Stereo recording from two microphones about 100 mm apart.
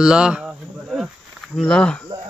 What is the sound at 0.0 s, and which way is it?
Speech, 10° right (ahead or behind).